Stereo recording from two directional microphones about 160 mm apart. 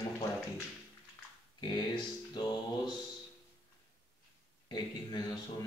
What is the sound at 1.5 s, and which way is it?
Speech, 25° left (ahead or behind).